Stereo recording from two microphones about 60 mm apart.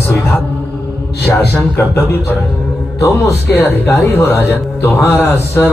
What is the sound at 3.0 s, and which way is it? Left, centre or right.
A man's voice, left.